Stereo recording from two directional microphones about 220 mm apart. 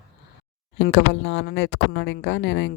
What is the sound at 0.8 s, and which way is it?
Speech, 60° left (ahead or behind).